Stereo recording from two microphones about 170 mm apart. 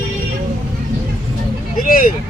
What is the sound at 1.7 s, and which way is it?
Speech, 55° left (ahead or behind).